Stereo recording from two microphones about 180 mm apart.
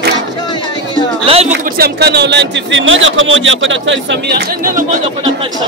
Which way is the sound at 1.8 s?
65° right (ahead or behind).